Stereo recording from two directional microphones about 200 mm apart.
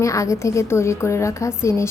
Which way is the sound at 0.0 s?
15° left (ahead or behind).